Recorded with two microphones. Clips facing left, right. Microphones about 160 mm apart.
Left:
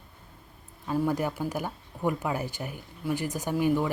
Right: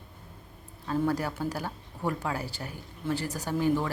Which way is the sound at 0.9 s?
10° left (ahead or behind).